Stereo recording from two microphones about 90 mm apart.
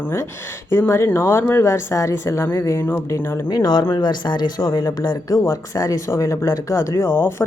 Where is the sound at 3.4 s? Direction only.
50° left (ahead or behind).